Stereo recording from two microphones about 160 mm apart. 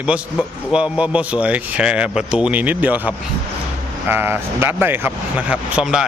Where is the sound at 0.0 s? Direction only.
5° right (ahead or behind).